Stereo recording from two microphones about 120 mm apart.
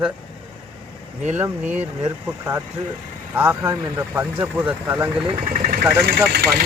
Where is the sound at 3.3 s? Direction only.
20° right (ahead or behind).